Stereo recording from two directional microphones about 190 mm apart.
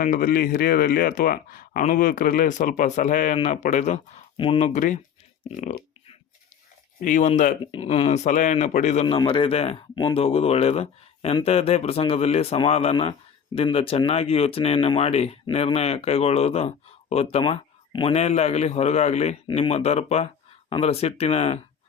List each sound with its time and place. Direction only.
0.0 s speech: 45° left (ahead or behind)
5.5 s a sound: 40° left (ahead or behind)
7.0 s speech: 45° left (ahead or behind)
7.6 s speech: 30° left (ahead or behind)